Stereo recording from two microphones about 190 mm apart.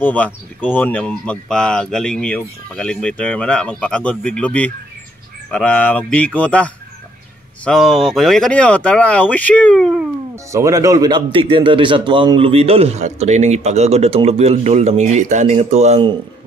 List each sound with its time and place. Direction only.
0.0 s speech: 10° left (ahead or behind)
10.3 s speech: 15° right (ahead or behind)